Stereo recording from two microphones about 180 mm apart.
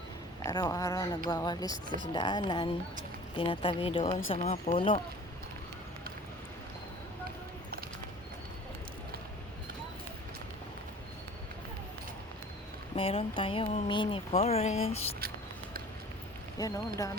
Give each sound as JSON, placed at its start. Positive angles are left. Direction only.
{"t": 0.4, "sound": "a woman's voice", "side_deg": 20}
{"t": 13.0, "sound": "speech", "side_deg": 30}
{"t": 15.2, "sound": "a sound", "side_deg": -55}
{"t": 16.6, "sound": "a woman's voice", "side_deg": 20}